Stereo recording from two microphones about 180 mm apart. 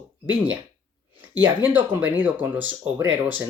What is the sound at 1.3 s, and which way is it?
Speech, 10° right (ahead or behind).